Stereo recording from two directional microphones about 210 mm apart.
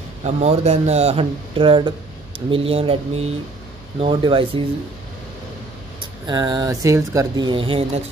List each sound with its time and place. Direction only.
0.2 s speech: 30° right (ahead or behind)
5.9 s speech: 20° right (ahead or behind)